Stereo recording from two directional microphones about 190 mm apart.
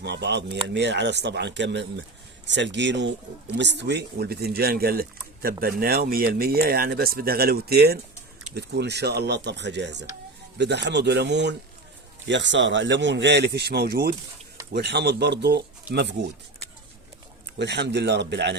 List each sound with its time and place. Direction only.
0.0 s speech: 60° right (ahead or behind)
17.6 s speech: 65° right (ahead or behind)